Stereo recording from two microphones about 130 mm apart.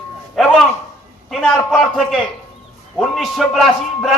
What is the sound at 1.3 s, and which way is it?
Speech, 5° left (ahead or behind).